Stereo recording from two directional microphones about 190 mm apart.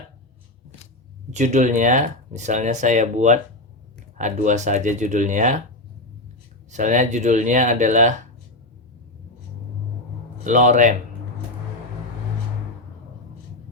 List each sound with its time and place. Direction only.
1.3 s speech: 40° right (ahead or behind)
6.7 s speech: 40° right (ahead or behind)
10.4 s speech: 40° right (ahead or behind)